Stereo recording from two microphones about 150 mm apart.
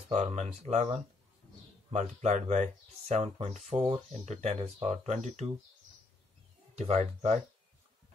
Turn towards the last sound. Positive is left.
turn(degrees=-50)  # may be behind; listen again after turning